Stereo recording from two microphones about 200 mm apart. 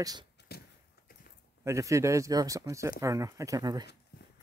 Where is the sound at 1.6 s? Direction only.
15° right (ahead or behind).